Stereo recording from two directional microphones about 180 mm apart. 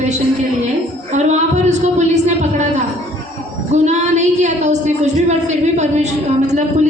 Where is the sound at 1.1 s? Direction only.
40° right (ahead or behind).